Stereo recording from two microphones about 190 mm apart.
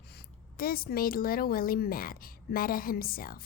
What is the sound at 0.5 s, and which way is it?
A woman's voice, 50° left (ahead or behind).